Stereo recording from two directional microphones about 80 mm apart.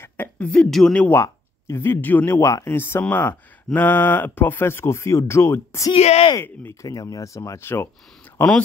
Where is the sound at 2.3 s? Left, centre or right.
Left.